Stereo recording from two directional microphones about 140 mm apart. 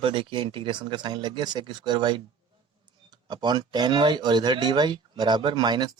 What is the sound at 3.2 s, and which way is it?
Speech, 30° right (ahead or behind).